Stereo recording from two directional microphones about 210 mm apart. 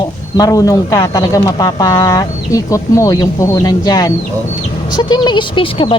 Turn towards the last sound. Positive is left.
turn(degrees=25)  # may be behind; listen again after turning